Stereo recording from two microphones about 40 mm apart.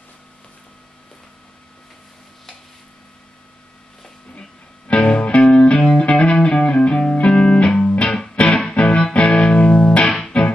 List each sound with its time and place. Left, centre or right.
4.4 s music: left